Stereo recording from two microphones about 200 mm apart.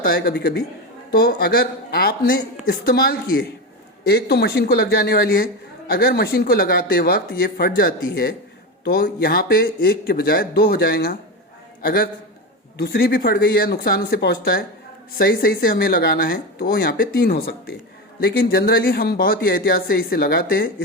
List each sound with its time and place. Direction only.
0.0 s a man's voice: 50° left (ahead or behind)